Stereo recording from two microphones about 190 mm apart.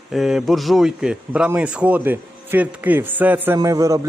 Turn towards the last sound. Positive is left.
turn(degrees=-15)  # may be behind; listen again after turning